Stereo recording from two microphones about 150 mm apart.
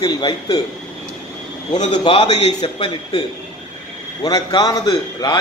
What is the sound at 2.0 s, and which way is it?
A man's voice, 30° left (ahead or behind).